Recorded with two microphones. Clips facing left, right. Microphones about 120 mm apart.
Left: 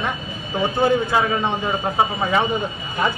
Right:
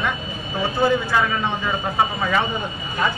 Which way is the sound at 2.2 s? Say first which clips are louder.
Left 2 dB; 20° left (ahead or behind).